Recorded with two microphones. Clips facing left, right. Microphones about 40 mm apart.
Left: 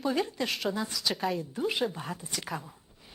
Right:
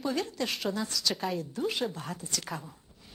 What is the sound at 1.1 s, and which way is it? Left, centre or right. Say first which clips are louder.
Speech: left 4 dB; centre.